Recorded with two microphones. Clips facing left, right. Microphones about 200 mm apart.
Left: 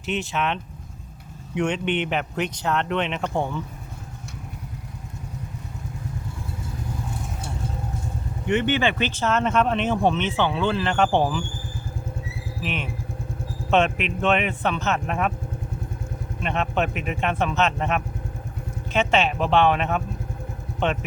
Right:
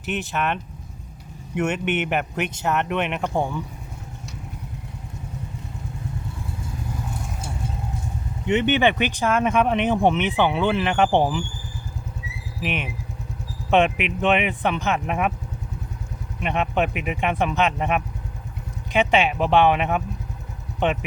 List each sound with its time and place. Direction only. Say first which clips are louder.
0.0 s speech: even; centre (ahead or behind)
8.4 s speech: right 2 dB; 20° right (ahead or behind)
12.6 s speech: right 2 dB; 15° right (ahead or behind)
16.4 s speech: right 2 dB; 15° right (ahead or behind)